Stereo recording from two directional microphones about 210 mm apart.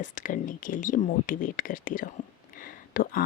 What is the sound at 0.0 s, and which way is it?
Speech, 40° left (ahead or behind).